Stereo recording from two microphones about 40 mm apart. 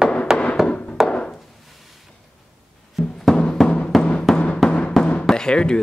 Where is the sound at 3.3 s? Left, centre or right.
Centre.